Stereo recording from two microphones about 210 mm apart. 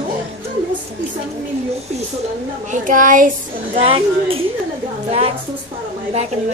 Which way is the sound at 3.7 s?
25° right (ahead or behind).